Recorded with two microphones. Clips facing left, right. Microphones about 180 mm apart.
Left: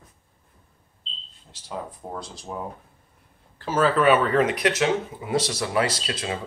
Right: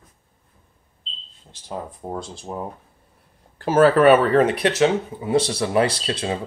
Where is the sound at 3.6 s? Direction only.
50° right (ahead or behind).